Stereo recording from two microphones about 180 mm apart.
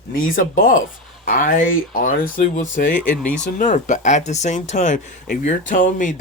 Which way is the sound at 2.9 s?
10° left (ahead or behind).